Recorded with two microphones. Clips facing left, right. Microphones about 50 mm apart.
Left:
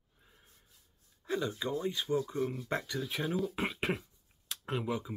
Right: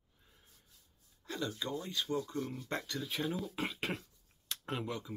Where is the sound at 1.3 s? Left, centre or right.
Centre.